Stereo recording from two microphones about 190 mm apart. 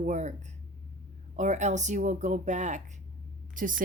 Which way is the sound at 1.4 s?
40° right (ahead or behind).